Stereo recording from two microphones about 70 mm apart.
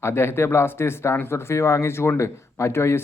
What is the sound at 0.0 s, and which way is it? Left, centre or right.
Speech, left.